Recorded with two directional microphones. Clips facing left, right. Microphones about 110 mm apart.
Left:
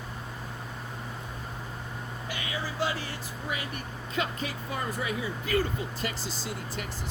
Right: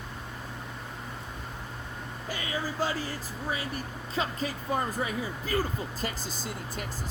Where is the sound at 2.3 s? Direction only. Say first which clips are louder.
Right 3 dB; 40° right (ahead or behind).